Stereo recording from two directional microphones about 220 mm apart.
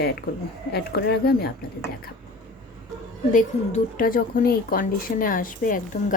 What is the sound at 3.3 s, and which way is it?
Speech, 35° left (ahead or behind).